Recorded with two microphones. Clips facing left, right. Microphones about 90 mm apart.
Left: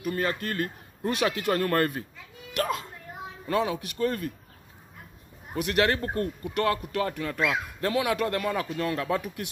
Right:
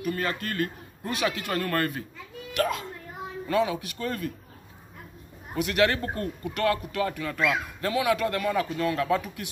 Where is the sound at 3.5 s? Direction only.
35° left (ahead or behind).